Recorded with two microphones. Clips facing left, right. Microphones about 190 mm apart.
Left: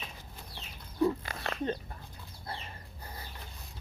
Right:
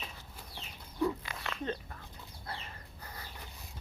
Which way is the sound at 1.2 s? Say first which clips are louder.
Left 4 dB; 45° left (ahead or behind).